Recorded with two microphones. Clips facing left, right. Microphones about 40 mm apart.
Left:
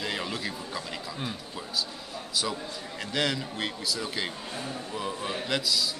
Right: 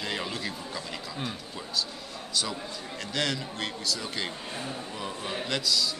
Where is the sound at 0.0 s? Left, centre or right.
Centre.